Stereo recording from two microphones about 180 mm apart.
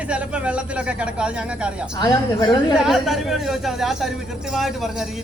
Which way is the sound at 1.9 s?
20° left (ahead or behind).